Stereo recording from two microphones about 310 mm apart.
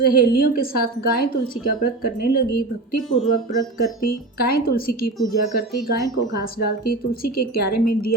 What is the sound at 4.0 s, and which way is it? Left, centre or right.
Speech, left.